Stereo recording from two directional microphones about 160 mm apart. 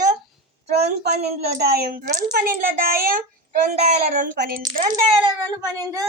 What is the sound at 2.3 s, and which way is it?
A child's voice, 60° right (ahead or behind).